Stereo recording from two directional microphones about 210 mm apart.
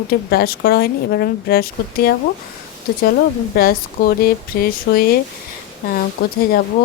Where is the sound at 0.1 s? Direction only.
45° left (ahead or behind).